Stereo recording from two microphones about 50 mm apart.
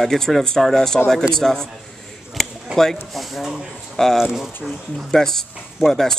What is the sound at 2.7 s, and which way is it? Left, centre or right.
Speech, centre.